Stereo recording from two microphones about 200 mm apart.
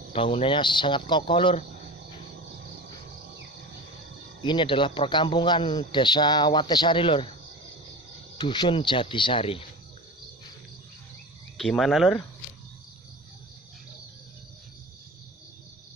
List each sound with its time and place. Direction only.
0.1 s a man's voice: 30° left (ahead or behind)
4.4 s a man's voice: 25° left (ahead or behind)
8.4 s a man's voice: 20° left (ahead or behind)
11.5 s speech: centre (ahead or behind)